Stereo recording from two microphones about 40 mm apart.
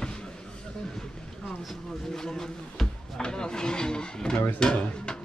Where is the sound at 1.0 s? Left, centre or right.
Centre.